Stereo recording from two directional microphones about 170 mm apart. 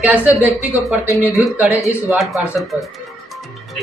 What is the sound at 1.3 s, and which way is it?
A man's voice, centre (ahead or behind).